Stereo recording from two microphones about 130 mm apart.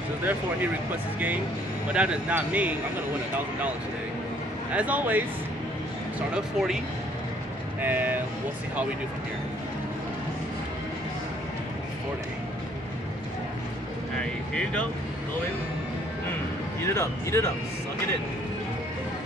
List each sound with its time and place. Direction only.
1.9 s speech: 10° right (ahead or behind)
4.7 s speech: 10° right (ahead or behind)
6.3 s speech: 5° right (ahead or behind)
7.8 s speech: 15° right (ahead or behind)
14.5 s speech: 10° left (ahead or behind)
16.8 s speech: 20° left (ahead or behind)